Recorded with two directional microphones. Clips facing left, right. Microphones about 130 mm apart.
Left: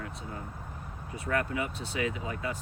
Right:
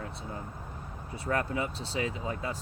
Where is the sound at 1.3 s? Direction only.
30° right (ahead or behind).